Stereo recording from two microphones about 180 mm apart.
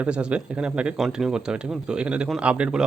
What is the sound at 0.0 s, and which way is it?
Speech, 5° right (ahead or behind).